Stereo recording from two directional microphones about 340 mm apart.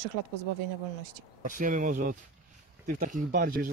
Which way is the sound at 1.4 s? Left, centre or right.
Right.